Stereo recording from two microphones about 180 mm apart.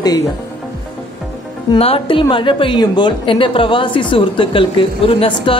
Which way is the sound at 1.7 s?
35° left (ahead or behind).